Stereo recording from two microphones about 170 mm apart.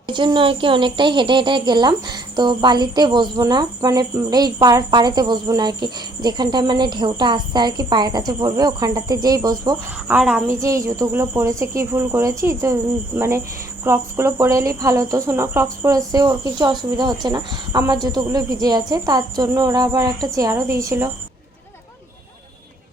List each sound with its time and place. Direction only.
0.1 s speech: 25° right (ahead or behind)
10.1 s speech: 5° right (ahead or behind)
10.5 s speech: 20° right (ahead or behind)